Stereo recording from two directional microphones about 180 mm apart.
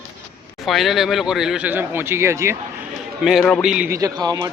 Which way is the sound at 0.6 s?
Centre (ahead or behind).